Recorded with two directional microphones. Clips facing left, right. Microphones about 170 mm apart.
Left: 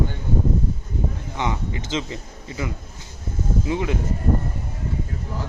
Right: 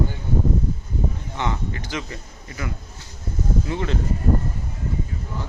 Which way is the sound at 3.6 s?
15° left (ahead or behind).